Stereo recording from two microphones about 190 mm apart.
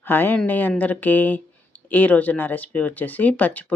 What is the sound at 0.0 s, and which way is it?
Speech, 10° left (ahead or behind).